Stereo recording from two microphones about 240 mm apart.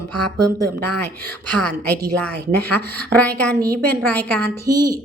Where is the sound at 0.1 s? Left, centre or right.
Right.